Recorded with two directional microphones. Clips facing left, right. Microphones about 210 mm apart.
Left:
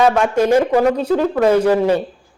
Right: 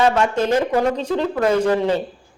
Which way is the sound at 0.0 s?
10° left (ahead or behind).